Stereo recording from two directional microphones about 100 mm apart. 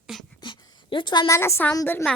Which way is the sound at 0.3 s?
45° left (ahead or behind).